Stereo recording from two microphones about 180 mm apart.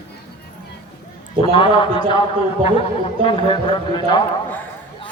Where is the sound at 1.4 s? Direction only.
25° left (ahead or behind).